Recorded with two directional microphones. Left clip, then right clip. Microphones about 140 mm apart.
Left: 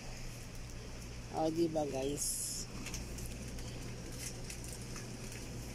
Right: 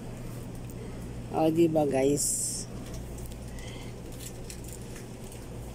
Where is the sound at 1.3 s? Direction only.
20° right (ahead or behind).